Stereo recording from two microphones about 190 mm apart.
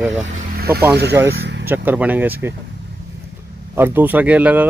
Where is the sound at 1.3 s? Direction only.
65° right (ahead or behind).